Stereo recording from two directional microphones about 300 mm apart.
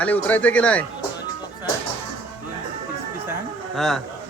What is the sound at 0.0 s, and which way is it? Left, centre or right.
Speech, centre.